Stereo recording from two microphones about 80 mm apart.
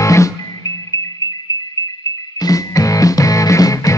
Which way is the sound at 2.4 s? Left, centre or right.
Left.